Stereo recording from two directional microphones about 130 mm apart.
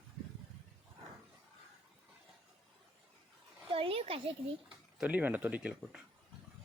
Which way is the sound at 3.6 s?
45° right (ahead or behind).